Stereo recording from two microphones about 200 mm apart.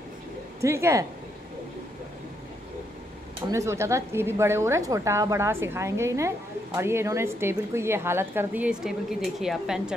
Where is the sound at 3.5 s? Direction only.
15° right (ahead or behind).